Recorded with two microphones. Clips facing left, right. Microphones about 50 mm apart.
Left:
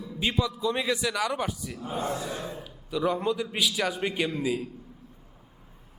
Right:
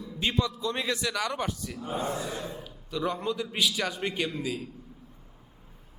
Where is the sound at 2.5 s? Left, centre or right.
Centre.